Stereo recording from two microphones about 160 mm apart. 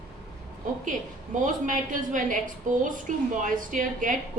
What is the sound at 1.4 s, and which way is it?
A woman's voice, 55° right (ahead or behind).